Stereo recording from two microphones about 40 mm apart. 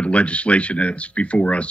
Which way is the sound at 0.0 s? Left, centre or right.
Left.